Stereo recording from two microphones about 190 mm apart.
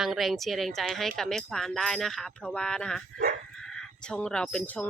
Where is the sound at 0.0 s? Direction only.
Centre (ahead or behind).